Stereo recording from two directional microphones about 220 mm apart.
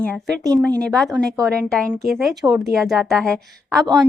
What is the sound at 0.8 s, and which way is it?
A woman's voice, centre (ahead or behind).